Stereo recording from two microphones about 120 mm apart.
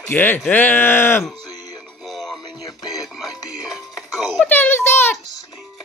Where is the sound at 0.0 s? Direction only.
15° left (ahead or behind).